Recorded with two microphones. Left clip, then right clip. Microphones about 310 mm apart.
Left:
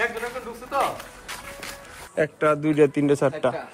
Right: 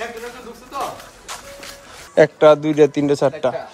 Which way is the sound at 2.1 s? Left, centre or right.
Centre.